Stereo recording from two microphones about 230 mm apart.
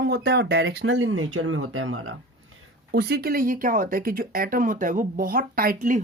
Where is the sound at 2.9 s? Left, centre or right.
Right.